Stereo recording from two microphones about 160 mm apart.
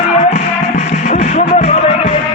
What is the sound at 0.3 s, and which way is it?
Music, 55° left (ahead or behind).